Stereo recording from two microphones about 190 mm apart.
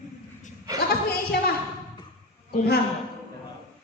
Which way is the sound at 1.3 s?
55° left (ahead or behind).